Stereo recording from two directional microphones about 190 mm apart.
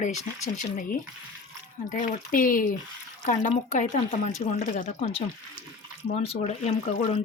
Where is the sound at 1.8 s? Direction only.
45° left (ahead or behind).